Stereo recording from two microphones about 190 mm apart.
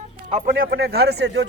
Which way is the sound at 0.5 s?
55° right (ahead or behind).